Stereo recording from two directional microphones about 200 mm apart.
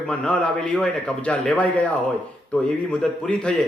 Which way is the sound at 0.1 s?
5° left (ahead or behind).